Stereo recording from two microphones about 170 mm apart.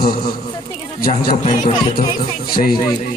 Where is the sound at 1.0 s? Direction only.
60° left (ahead or behind).